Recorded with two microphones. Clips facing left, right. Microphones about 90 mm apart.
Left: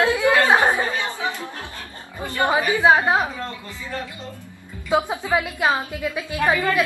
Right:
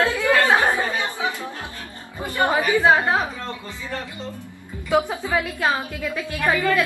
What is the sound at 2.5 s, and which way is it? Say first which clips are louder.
Speech: left 1 dB; 15° left (ahead or behind).